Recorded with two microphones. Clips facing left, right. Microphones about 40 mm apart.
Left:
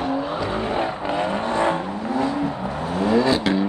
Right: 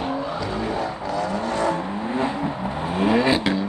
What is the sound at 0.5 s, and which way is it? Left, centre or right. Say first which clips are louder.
Vehicle: left 2 dB; left.